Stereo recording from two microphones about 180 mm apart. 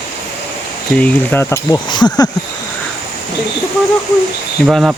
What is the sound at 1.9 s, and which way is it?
Speech, 25° left (ahead or behind).